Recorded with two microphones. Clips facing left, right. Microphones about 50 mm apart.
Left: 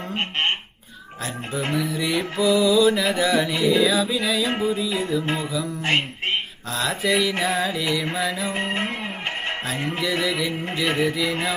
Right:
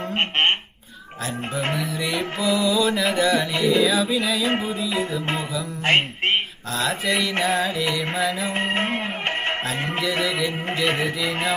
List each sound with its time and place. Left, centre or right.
0.2 s speech: right
1.7 s mantra: centre
5.8 s speech: right
6.7 s mantra: centre
10.0 s mantra: centre